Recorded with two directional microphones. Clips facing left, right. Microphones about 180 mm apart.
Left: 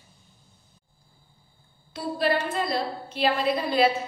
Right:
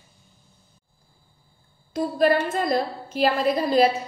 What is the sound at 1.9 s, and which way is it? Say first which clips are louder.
A woman's voice: right 5 dB; 45° right (ahead or behind).